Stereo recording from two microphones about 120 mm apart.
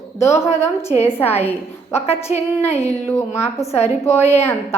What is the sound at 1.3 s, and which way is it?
A woman's voice, 60° left (ahead or behind).